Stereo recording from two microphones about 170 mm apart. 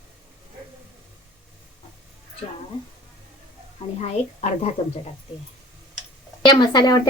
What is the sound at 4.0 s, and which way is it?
Speech, 40° left (ahead or behind).